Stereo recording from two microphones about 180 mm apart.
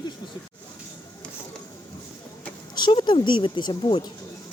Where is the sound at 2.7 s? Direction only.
25° left (ahead or behind).